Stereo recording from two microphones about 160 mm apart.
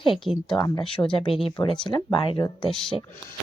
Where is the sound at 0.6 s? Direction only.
30° left (ahead or behind).